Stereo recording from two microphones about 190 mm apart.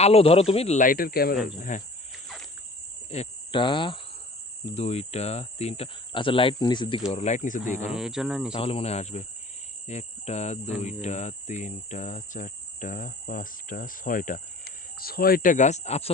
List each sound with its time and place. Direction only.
0.0 s speech: 30° left (ahead or behind); by 1.4 s 50° left (ahead or behind)
1.7 s speech: 40° left (ahead or behind)
2.2 s cricket: centre (ahead or behind)
3.1 s cricket: 30° left (ahead or behind)
4.7 s speech: 35° left (ahead or behind)
7.1 s speech: 35° left (ahead or behind)
7.9 s speech: 5° right (ahead or behind)
8.5 s speech: 30° left (ahead or behind)
9.8 s cricket: 35° left (ahead or behind)
10.8 s speech: 35° left (ahead or behind)